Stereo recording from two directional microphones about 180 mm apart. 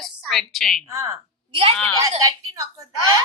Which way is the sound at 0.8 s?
20° right (ahead or behind).